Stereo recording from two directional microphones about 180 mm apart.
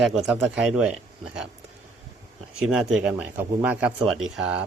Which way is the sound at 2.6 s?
5° right (ahead or behind).